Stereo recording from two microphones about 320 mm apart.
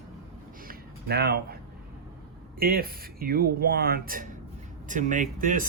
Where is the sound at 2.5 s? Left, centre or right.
Right.